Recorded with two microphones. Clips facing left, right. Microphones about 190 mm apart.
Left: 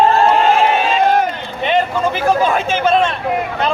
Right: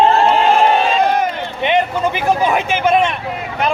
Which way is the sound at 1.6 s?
15° right (ahead or behind).